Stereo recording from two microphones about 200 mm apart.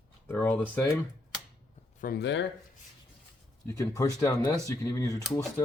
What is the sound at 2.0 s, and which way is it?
Speech, 50° left (ahead or behind).